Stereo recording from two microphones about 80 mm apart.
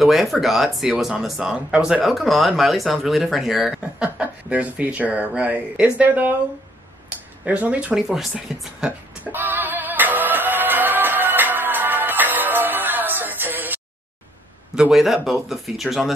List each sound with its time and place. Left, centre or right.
0.0 s speech: centre; by 6.3 s right
7.4 s speech: centre
8.5 s speech: centre
9.2 s music: right
14.8 s speech: centre